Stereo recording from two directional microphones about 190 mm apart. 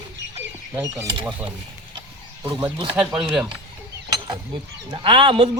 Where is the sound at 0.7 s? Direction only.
15° right (ahead or behind).